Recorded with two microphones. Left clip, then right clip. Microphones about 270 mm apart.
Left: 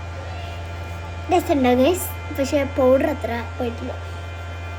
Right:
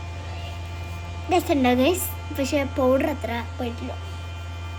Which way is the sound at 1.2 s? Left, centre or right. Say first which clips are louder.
Left 3 dB; centre.